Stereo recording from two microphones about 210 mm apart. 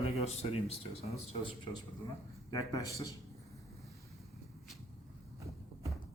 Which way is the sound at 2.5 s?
15° left (ahead or behind).